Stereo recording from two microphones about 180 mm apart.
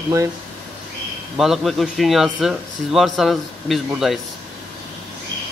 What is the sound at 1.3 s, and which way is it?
Speech, centre (ahead or behind).